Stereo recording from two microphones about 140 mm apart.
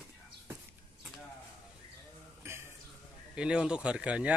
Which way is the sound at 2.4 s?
15° right (ahead or behind).